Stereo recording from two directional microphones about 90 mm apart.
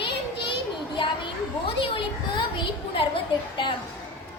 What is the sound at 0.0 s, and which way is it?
Child singing, 70° left (ahead or behind).